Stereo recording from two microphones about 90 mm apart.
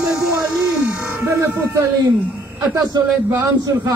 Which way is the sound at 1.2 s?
30° right (ahead or behind).